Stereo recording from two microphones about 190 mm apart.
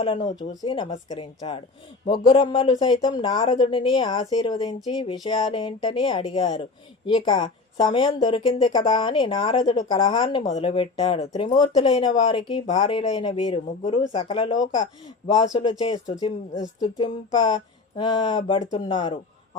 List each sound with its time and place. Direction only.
0.0 s speech: 25° left (ahead or behind)